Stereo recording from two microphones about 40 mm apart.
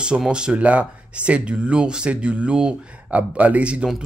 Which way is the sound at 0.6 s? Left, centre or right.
Right.